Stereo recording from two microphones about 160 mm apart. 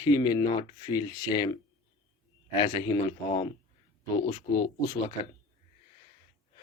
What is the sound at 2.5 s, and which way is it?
Speech, 35° left (ahead or behind).